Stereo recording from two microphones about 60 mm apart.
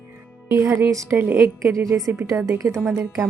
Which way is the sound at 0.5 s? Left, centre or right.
Right.